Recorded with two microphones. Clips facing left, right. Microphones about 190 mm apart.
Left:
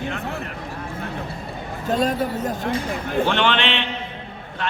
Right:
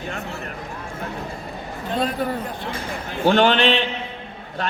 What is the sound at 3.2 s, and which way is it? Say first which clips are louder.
Speech: right 5 dB; 40° right (ahead or behind).